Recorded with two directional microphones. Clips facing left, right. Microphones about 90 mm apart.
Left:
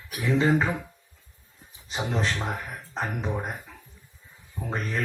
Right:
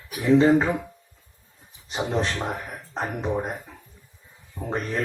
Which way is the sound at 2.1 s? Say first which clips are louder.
Right 2 dB; 25° right (ahead or behind).